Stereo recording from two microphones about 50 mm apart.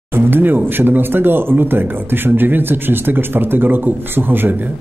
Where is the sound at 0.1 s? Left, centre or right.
Right.